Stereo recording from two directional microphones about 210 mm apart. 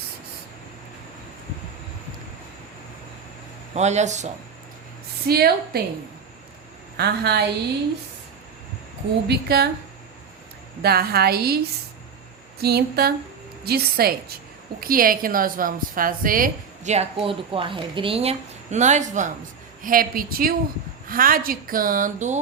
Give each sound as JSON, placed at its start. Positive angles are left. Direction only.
{"t": 3.8, "sound": "a woman's voice", "side_deg": -35}
{"t": 5.3, "sound": "a woman's voice", "side_deg": -50}
{"t": 6.9, "sound": "a woman's voice", "side_deg": -50}
{"t": 9.2, "sound": "a woman's voice", "side_deg": -50}
{"t": 10.8, "sound": "a woman's voice", "side_deg": -50}
{"t": 12.6, "sound": "a woman's voice", "side_deg": -50}